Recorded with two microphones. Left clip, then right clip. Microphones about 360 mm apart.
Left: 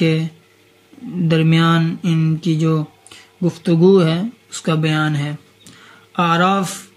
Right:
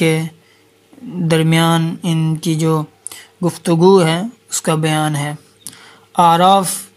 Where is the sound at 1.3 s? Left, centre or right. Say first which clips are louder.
Right 2 dB; centre.